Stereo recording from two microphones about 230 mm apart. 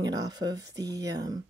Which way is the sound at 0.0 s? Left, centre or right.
Centre.